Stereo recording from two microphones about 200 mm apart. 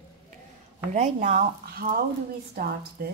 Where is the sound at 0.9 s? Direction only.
35° right (ahead or behind).